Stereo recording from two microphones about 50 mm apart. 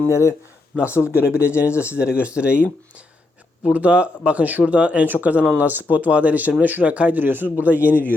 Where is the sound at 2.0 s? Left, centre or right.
Right.